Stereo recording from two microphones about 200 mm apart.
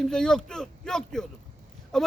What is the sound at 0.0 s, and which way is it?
A man's voice, 5° left (ahead or behind).